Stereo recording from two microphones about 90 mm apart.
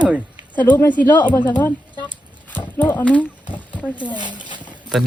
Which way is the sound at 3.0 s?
15° left (ahead or behind).